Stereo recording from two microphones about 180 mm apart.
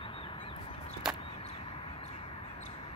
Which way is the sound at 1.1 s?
30° left (ahead or behind).